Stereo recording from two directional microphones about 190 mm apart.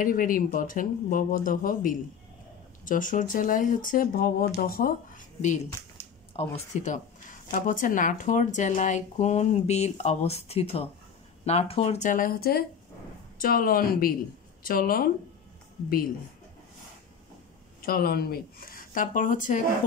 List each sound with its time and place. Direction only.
0.0 s speech: 45° left (ahead or behind)
17.8 s speech: 50° left (ahead or behind)